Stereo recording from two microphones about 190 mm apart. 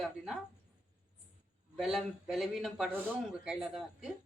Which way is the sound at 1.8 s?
Centre (ahead or behind).